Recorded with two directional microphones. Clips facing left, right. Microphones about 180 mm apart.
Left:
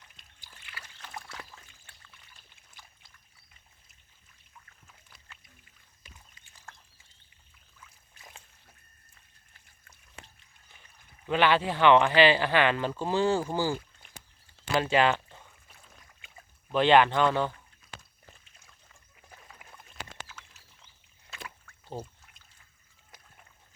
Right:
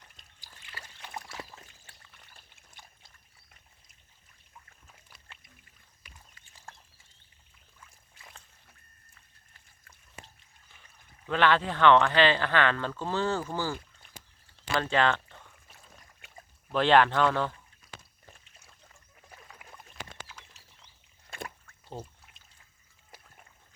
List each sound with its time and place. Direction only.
0.4 s trickle: 35° right (ahead or behind)
2.1 s pour: 55° right (ahead or behind)
11.3 s speech: 5° left (ahead or behind)
14.8 s speech: 10° left (ahead or behind)
16.7 s speech: centre (ahead or behind)
21.2 s a sound: 50° right (ahead or behind)